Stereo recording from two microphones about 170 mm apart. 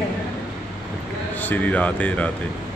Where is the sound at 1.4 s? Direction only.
10° left (ahead or behind).